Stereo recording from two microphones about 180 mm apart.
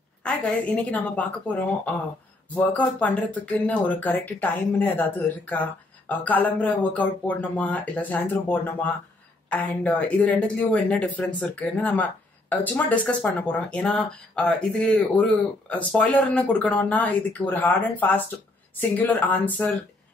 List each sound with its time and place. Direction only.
0.2 s speech: 5° left (ahead or behind)
2.7 s speech: 10° left (ahead or behind)